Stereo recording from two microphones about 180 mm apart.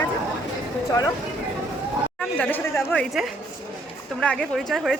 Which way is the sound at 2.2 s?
10° left (ahead or behind).